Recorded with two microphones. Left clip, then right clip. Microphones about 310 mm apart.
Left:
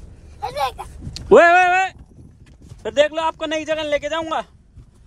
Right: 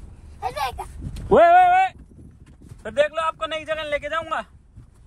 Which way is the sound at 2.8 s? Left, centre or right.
Left.